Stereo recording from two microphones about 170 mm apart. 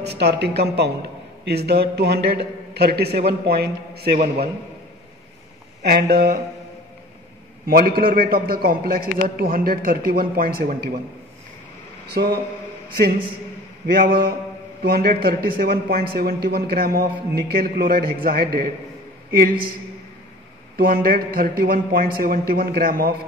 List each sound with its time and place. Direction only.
0.0 s a woman's voice: 75° right (ahead or behind)
5.8 s a man's voice: 70° right (ahead or behind)
7.6 s speech: 60° right (ahead or behind)
12.1 s a man's voice: 70° right (ahead or behind)
13.9 s speech: 60° right (ahead or behind)
20.7 s speech: 60° right (ahead or behind)